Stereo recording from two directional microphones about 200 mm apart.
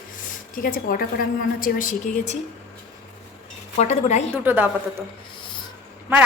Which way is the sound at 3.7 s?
35° left (ahead or behind).